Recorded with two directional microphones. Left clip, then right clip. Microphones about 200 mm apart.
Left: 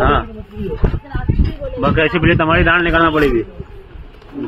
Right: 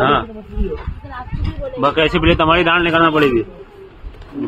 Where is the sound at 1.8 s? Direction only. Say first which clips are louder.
Even; 10° right (ahead or behind).